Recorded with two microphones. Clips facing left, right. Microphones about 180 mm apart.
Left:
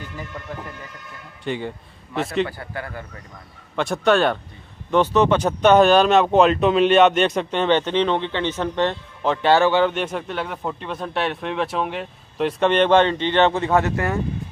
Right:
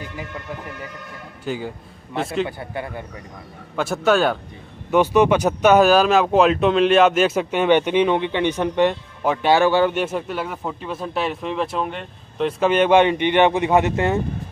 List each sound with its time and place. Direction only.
1.4 s a man's voice: 5° right (ahead or behind)
2.6 s a man's voice: 20° right (ahead or behind)
3.7 s a man's voice: 5° right (ahead or behind); by 14.2 s 20° right (ahead or behind)